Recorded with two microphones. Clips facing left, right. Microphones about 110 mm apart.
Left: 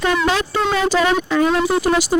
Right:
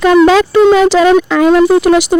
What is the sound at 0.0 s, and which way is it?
Speech, 90° right.